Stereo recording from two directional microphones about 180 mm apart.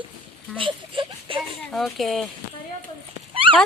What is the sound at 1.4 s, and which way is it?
Speech, centre (ahead or behind).